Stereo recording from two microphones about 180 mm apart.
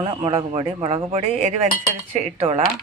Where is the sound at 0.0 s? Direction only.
35° right (ahead or behind).